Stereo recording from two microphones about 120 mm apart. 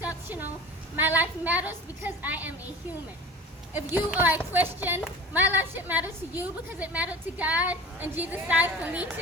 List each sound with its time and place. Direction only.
0.3 s a woman's voice: 15° right (ahead or behind)
3.7 s a woman's voice: 15° right (ahead or behind)